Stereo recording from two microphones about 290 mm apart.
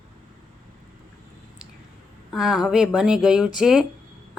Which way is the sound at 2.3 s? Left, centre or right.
Centre.